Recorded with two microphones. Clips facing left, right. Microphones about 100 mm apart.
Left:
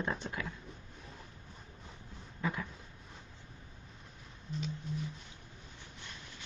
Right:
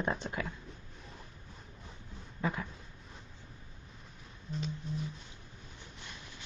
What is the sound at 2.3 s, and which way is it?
Dog, 30° right (ahead or behind).